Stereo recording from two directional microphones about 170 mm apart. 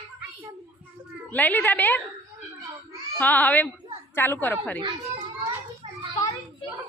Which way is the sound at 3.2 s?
10° left (ahead or behind).